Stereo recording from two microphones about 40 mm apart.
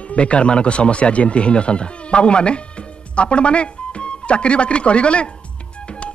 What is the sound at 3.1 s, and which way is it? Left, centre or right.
Speech, left.